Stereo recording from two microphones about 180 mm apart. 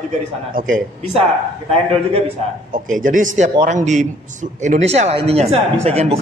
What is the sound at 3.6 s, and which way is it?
Speech, 40° right (ahead or behind).